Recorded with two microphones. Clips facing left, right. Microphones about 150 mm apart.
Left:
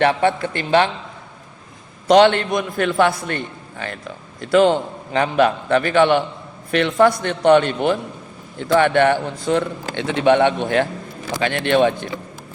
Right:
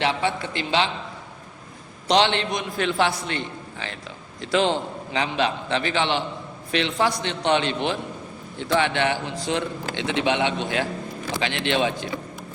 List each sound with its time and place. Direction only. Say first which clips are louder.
0.0 s a man's voice: left 7 dB; 55° left (ahead or behind)
2.0 s a man's voice: left 8 dB; 50° left (ahead or behind)